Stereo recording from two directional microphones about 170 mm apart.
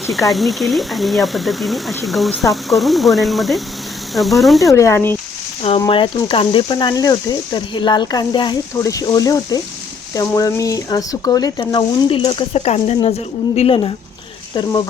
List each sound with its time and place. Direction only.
0.3 s speech: centre (ahead or behind)
4.6 s speech: 15° left (ahead or behind)
5.8 s speech: 25° left (ahead or behind)